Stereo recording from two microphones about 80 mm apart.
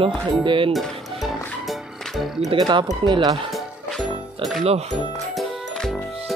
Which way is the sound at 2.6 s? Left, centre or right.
Right.